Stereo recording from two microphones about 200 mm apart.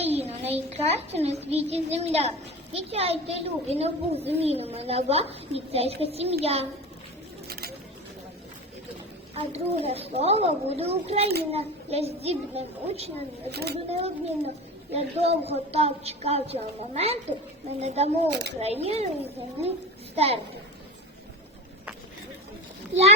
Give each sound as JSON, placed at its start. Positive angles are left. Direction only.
{"t": 0.1, "sound": "a child's voice", "side_deg": -30}
{"t": 7.4, "sound": "a sound", "side_deg": -50}
{"t": 9.3, "sound": "a child's voice", "side_deg": -30}
{"t": 13.5, "sound": "speech", "side_deg": -55}
{"t": 14.0, "sound": "a child's voice", "side_deg": -30}
{"t": 18.3, "sound": "speech", "side_deg": -60}
{"t": 18.6, "sound": "a child's voice", "side_deg": -30}